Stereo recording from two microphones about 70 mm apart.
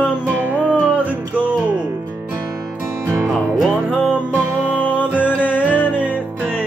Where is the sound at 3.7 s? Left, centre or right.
Right.